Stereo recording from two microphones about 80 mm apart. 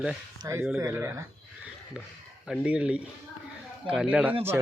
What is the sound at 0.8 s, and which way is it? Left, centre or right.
Speech, right.